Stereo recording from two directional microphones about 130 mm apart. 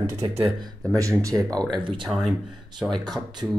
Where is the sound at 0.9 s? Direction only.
25° right (ahead or behind).